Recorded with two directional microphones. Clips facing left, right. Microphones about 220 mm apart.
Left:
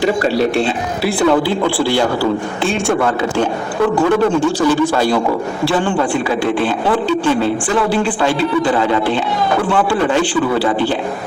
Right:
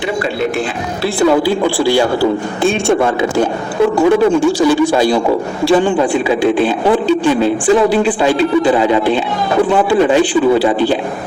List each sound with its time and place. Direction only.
0.0 s a man's voice: 35° left (ahead or behind)
1.3 s speech: 10° right (ahead or behind)